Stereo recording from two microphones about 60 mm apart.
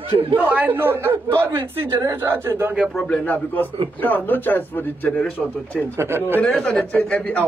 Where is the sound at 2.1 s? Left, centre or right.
Right.